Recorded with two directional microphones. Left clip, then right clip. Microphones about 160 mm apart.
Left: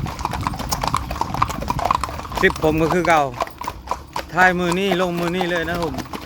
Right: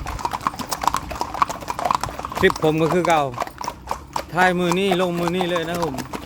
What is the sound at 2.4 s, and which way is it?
Speech, 10° right (ahead or behind).